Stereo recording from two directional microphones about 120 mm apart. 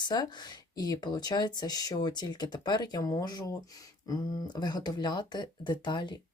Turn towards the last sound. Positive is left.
turn(degrees=40)  # may be behind; listen again after turning